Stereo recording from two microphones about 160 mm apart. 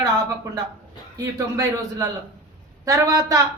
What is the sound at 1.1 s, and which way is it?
Speech, 20° right (ahead or behind).